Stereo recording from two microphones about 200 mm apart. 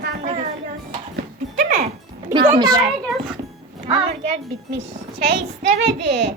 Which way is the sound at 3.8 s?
30° right (ahead or behind).